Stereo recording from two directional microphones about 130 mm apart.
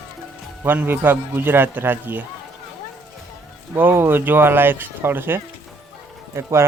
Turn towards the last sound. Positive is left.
turn(degrees=-20)  # may be behind; listen again after turning